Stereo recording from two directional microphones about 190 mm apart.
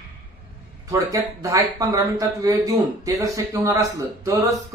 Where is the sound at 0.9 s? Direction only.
15° right (ahead or behind).